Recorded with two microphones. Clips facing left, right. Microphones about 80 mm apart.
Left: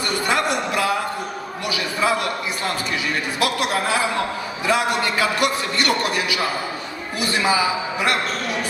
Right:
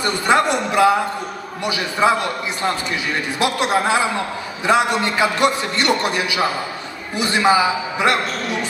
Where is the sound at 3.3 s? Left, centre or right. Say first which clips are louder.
Right 4 dB; right.